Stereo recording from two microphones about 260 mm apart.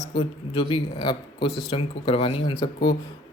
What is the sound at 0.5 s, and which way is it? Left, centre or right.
Speech, centre.